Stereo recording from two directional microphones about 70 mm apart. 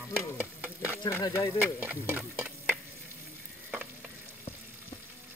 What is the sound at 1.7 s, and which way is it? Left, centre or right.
Speech, right.